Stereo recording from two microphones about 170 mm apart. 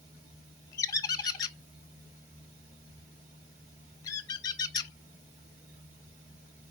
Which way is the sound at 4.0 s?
20° left (ahead or behind).